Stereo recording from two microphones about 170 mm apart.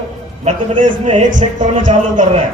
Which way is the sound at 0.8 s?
45° right (ahead or behind).